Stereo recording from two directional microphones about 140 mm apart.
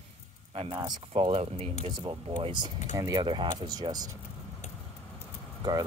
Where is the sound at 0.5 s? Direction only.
45° right (ahead or behind).